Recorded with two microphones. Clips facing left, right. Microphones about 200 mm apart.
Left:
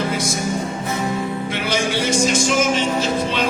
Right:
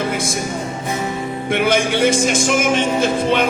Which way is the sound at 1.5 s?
55° right (ahead or behind).